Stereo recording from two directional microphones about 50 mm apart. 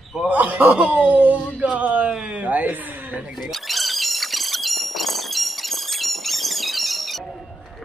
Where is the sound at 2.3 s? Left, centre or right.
Right.